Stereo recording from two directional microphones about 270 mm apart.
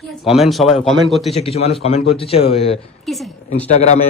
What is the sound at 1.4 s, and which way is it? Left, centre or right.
Speech, left.